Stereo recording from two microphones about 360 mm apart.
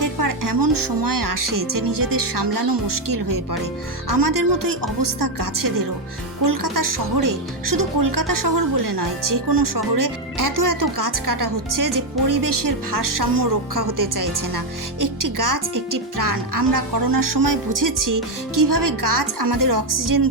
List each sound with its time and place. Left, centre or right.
0.0 s speech: right